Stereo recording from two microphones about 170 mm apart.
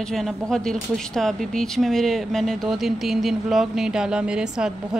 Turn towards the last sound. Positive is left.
turn(degrees=-5)  # may be behind; listen again after turning